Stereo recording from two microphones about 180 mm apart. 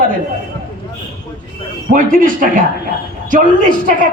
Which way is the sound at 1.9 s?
50° right (ahead or behind).